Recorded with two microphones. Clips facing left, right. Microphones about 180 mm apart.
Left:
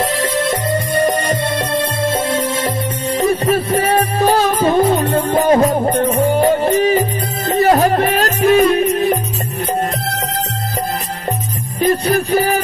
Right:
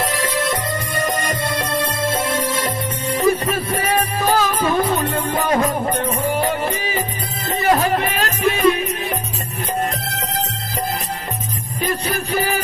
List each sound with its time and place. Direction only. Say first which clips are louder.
0.2 s music: left 4 dB; 25° left (ahead or behind)
11.8 s music: left 8 dB; 40° left (ahead or behind)